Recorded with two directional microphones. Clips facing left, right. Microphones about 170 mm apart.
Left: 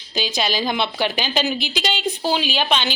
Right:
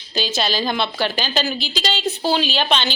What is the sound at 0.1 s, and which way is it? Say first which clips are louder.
A woman's voice: right 1 dB; 15° left (ahead or behind).